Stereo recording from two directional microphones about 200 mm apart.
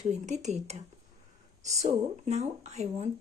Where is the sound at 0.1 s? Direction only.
35° right (ahead or behind).